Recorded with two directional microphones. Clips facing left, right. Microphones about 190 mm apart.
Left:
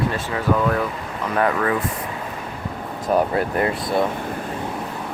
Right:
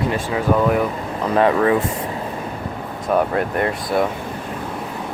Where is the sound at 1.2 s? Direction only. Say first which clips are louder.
Right 5 dB; 30° right (ahead or behind).